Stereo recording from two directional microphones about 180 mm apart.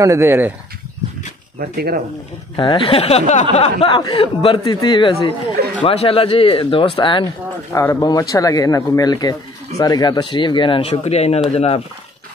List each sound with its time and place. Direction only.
0.0 s speech: 15° right (ahead or behind)
1.6 s speech: 60° right (ahead or behind)
2.5 s speech: 30° left (ahead or behind)